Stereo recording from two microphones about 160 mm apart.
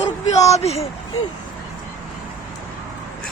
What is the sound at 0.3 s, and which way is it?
Speech, 45° left (ahead or behind).